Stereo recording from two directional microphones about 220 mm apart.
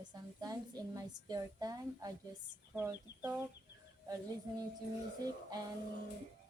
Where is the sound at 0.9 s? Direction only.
15° right (ahead or behind).